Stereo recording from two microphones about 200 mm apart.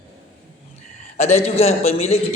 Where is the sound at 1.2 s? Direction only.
35° left (ahead or behind).